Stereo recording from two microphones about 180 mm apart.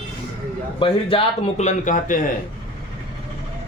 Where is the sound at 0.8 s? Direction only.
30° left (ahead or behind); by 2.3 s 50° left (ahead or behind).